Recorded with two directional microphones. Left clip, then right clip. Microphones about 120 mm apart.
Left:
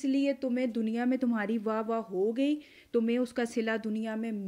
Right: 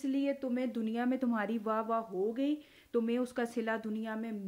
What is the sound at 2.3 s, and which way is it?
Speech, 40° left (ahead or behind).